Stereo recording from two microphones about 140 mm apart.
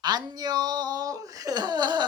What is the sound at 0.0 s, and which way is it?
Speech, 30° right (ahead or behind).